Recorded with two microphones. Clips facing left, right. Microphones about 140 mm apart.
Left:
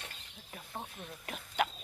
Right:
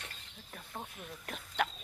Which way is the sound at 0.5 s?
5° left (ahead or behind).